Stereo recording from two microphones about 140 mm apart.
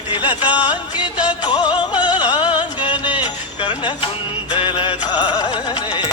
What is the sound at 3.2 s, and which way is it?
Music, 35° left (ahead or behind).